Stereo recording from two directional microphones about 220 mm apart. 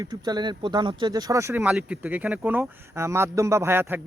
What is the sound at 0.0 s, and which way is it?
Speech, 20° right (ahead or behind).